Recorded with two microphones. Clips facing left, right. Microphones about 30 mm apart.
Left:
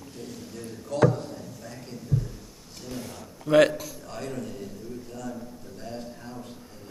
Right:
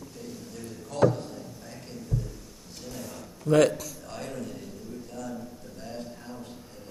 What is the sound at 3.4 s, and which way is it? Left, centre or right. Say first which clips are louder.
Speech: left 2 dB; centre.